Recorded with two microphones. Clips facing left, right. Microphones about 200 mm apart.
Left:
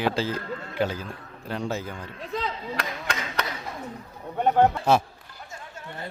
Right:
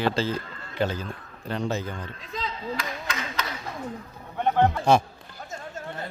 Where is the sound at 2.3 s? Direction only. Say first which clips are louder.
Left 2 dB; 65° left (ahead or behind).